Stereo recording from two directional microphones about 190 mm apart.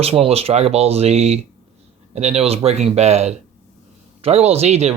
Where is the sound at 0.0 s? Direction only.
30° right (ahead or behind).